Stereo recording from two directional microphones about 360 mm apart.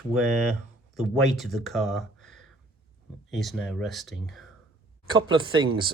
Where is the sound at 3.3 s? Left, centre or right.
Centre.